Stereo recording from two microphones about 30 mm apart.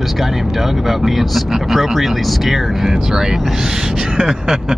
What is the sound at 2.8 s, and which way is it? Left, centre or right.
Speech, centre.